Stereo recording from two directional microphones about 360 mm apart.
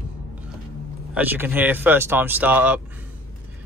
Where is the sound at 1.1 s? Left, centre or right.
Centre.